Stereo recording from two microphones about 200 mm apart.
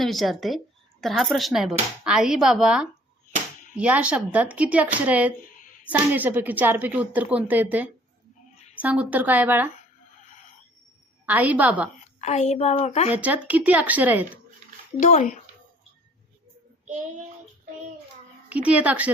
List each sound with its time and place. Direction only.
0.0 s speech: centre (ahead or behind)
11.3 s speech: 10° right (ahead or behind)
12.2 s a woman's voice: 35° left (ahead or behind)
13.1 s speech: 5° right (ahead or behind)
15.0 s a woman's voice: 40° left (ahead or behind)
18.4 s speech: 5° right (ahead or behind)